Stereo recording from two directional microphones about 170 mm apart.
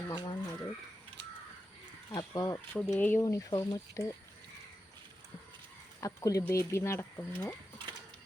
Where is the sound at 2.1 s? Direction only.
20° left (ahead or behind).